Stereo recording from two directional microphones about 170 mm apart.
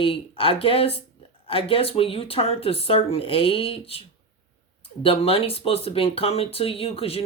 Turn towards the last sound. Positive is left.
turn(degrees=35)  # may be behind; listen again after turning